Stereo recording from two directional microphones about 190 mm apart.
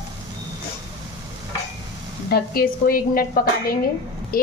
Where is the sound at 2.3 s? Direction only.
50° left (ahead or behind).